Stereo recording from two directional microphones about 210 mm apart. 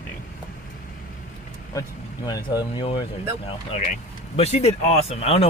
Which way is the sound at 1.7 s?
15° left (ahead or behind).